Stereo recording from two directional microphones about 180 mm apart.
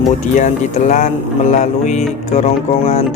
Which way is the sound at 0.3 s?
40° left (ahead or behind).